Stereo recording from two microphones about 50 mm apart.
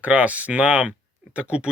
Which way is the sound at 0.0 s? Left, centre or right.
Right.